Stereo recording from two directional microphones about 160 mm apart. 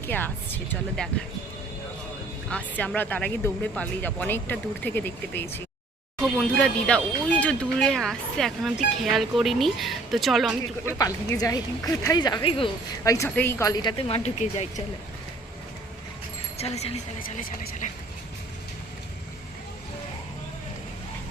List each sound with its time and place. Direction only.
0.0 s speech: 10° left (ahead or behind)
2.5 s speech: 10° left (ahead or behind)
10.8 s speech: 20° left (ahead or behind)
13.1 s speech: 20° left (ahead or behind)
14.1 s speech: 45° left (ahead or behind)
16.6 s a woman's voice: 40° left (ahead or behind)
17.3 s speech: 50° left (ahead or behind)